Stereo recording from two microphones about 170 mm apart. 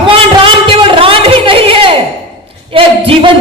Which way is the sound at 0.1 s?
30° right (ahead or behind).